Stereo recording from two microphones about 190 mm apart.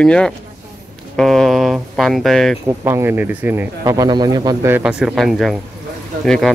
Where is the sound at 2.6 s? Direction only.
15° right (ahead or behind).